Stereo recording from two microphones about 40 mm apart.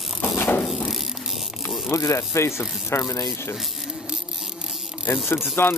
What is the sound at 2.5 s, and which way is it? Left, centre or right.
Speech, left.